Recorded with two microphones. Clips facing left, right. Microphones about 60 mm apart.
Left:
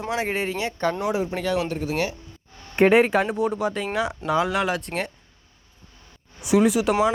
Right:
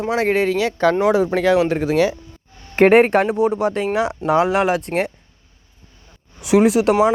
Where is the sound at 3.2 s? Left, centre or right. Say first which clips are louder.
Right 6 dB; centre.